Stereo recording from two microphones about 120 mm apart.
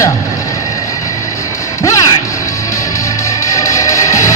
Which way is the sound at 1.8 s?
25° left (ahead or behind).